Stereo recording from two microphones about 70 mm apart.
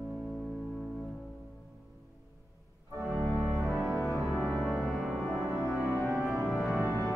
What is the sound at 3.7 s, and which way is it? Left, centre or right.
Music, centre.